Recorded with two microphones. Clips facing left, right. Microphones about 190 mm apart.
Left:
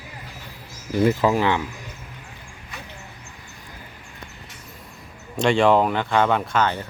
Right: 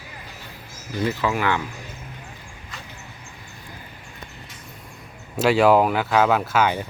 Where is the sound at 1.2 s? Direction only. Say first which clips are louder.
Left 4 dB; 35° left (ahead or behind).